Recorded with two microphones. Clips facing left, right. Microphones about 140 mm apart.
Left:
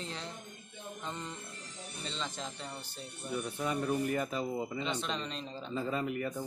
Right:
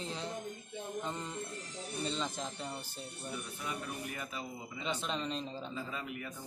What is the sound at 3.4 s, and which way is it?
A man's voice, 45° left (ahead or behind).